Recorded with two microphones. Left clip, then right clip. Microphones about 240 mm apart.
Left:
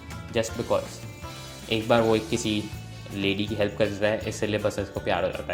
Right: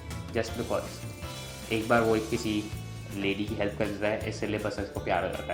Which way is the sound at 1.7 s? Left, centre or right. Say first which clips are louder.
Left 3 dB; left.